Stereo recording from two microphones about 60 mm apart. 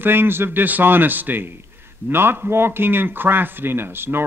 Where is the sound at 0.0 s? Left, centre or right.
Right.